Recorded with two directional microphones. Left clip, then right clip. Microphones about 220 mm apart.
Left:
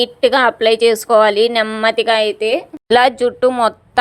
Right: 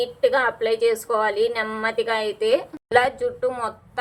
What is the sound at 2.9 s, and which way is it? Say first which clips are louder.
Speech: left 8 dB; 40° left (ahead or behind).